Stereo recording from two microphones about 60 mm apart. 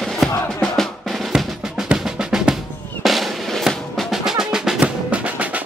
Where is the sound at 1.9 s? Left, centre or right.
Centre.